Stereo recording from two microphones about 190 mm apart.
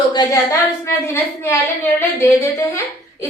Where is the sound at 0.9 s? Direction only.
15° left (ahead or behind).